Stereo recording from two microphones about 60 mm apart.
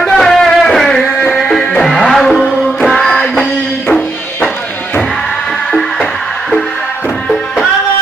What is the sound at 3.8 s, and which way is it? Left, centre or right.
Music, left.